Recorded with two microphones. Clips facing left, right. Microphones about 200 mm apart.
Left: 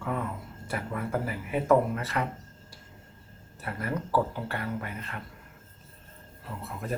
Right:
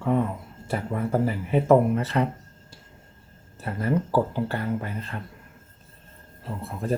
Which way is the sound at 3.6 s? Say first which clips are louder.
Right 7 dB; 25° right (ahead or behind).